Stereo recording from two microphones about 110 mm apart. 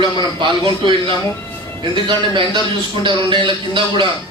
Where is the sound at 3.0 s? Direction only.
45° right (ahead or behind).